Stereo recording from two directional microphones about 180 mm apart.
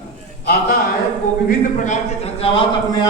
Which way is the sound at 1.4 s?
45° left (ahead or behind).